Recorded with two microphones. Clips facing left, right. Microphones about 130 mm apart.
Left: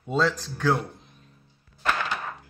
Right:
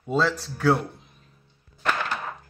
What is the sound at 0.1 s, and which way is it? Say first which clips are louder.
Speech: right 1 dB; 5° right (ahead or behind).